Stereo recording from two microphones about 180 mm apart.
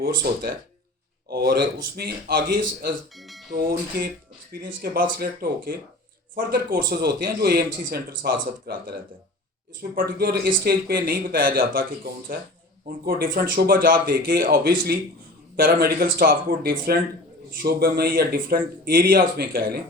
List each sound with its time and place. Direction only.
0.0 s speech: 60° right (ahead or behind)
3.2 s speech: centre (ahead or behind)
3.5 s speech: 60° right (ahead or behind)